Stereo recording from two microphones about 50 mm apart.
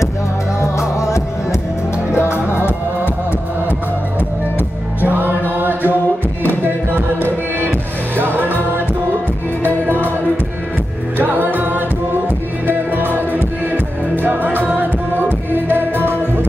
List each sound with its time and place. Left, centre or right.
0.6 s music: left
5.0 s music: right
9.8 s music: right
11.1 s music: right